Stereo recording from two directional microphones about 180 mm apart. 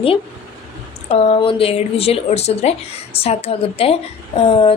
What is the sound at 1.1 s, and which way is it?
Speech, 35° left (ahead or behind).